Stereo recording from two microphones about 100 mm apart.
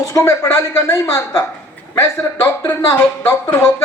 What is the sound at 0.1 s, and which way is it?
A woman's voice, 30° left (ahead or behind).